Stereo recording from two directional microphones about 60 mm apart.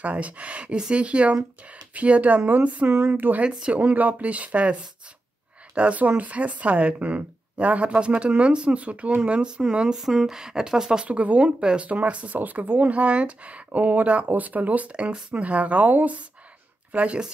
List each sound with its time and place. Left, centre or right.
0.0 s speech: right
3.4 s speech: centre
5.8 s speech: right
11.1 s speech: right